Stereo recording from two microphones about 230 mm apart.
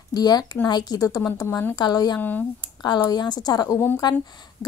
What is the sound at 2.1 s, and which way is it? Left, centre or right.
Speech, centre.